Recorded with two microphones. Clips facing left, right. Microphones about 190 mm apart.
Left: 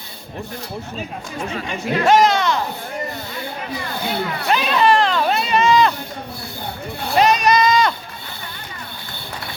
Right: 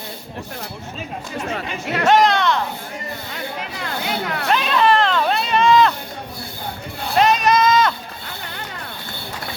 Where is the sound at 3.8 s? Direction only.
70° right (ahead or behind).